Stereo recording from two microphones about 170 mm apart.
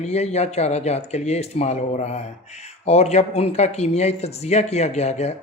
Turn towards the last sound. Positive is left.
turn(degrees=40)  # may be behind; listen again after turning